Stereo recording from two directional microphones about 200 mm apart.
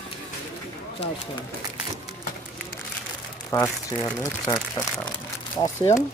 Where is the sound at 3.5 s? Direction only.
15° left (ahead or behind).